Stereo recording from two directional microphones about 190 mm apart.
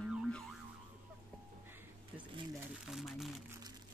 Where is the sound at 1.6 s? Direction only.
10° right (ahead or behind).